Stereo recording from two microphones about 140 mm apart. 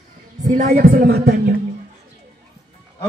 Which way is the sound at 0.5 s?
90° right.